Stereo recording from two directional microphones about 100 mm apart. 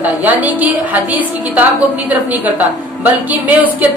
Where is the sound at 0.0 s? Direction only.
15° right (ahead or behind).